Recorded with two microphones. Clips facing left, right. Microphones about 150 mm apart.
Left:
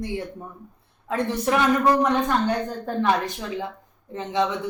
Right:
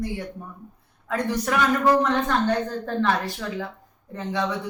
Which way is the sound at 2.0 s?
15° left (ahead or behind).